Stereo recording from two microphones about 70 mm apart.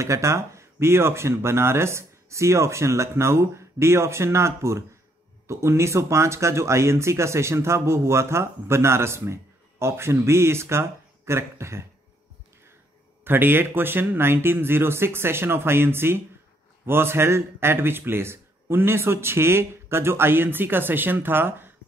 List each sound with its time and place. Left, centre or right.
0.0 s speech: right
13.2 s speech: right